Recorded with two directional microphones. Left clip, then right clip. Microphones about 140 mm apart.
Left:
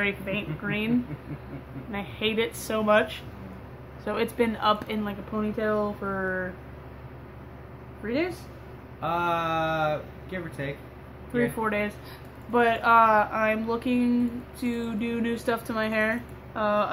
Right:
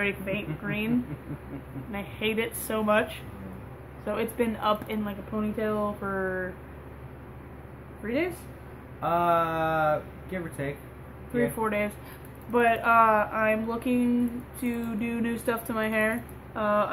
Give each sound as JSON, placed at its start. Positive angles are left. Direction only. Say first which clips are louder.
{"t": 0.0, "sound": "speech", "louder": "left 1 dB", "side_deg": 20}
{"t": 8.1, "sound": "speech", "louder": "left 1 dB", "side_deg": 10}
{"t": 9.0, "sound": "speech", "louder": "right 2 dB", "side_deg": -10}
{"t": 11.3, "sound": "speech", "louder": "left 1 dB", "side_deg": 15}